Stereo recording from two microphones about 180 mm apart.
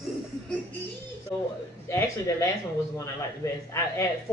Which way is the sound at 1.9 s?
15° left (ahead or behind).